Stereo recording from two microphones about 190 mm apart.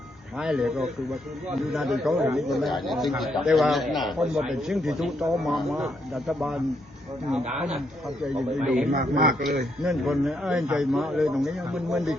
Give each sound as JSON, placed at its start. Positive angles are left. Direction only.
{"t": 0.3, "sound": "a man's voice", "side_deg": -5}
{"t": 8.4, "sound": "a man's voice", "side_deg": -5}
{"t": 8.9, "sound": "a man's voice", "side_deg": -50}
{"t": 9.8, "sound": "a man's voice", "side_deg": 0}